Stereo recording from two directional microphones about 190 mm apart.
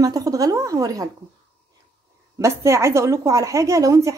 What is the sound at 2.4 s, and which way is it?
A woman's voice, 15° right (ahead or behind).